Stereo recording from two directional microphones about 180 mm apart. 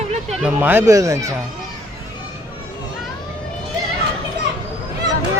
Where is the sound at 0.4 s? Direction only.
10° right (ahead or behind).